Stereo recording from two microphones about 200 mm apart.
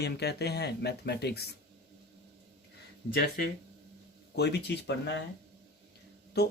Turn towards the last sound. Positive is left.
turn(degrees=55)  # may be behind; listen again after turning